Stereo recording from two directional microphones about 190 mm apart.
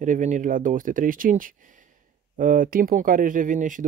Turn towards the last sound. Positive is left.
turn(degrees=-40)  # may be behind; listen again after turning